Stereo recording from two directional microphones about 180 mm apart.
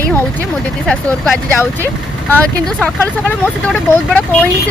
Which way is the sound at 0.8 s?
5° left (ahead or behind).